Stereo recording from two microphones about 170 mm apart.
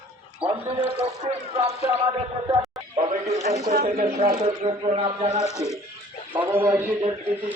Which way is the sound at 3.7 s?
55° right (ahead or behind).